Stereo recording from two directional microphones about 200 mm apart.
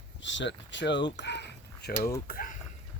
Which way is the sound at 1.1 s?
60° left (ahead or behind).